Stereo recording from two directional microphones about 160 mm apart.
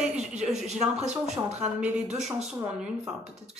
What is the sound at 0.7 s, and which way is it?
Speech, 45° right (ahead or behind).